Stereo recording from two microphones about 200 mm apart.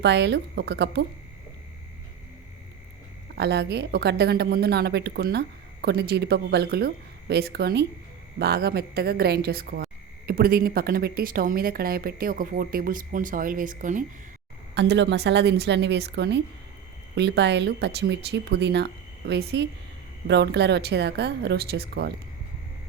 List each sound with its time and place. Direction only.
0.0 s speech: 60° right (ahead or behind)
3.3 s a woman's voice: 55° right (ahead or behind); by 14.0 s 40° right (ahead or behind)
14.8 s speech: 60° right (ahead or behind)